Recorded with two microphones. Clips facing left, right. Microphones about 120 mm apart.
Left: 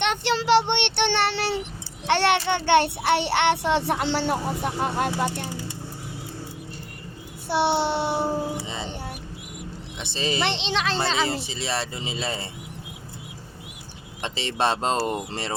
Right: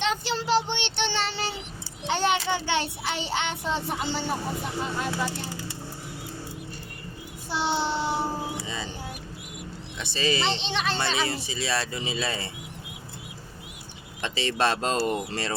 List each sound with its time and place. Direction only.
0.0 s child singing: 80° left
2.0 s a sound: 75° left (ahead or behind)
2.5 s speech: 60° left (ahead or behind)
7.4 s speech: 65° left (ahead or behind)
8.5 s music: 25° left (ahead or behind)
10.0 s speech: 25° left (ahead or behind)
10.4 s speech: 90° left
10.9 s speech: 25° left (ahead or behind)
14.2 s speech: 20° left (ahead or behind)